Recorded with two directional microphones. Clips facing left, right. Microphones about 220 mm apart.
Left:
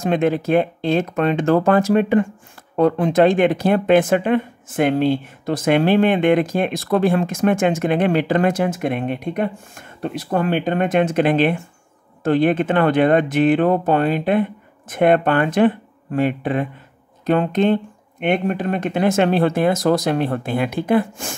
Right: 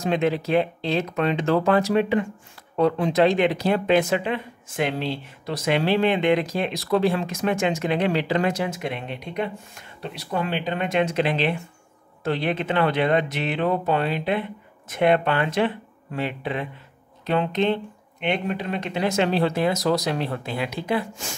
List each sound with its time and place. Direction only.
0.0 s speech: 50° left (ahead or behind)